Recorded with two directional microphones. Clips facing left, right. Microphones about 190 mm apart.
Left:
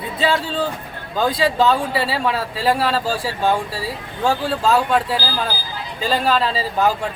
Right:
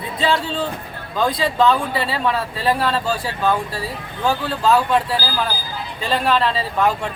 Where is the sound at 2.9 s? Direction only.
30° left (ahead or behind).